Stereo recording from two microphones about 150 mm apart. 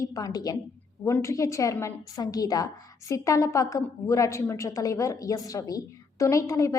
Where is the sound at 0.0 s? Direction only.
25° left (ahead or behind).